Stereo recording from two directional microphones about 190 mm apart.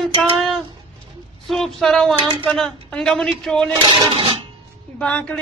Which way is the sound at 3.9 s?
25° right (ahead or behind).